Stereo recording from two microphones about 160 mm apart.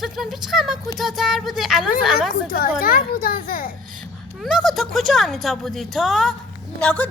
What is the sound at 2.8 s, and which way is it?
Speech, 65° left (ahead or behind).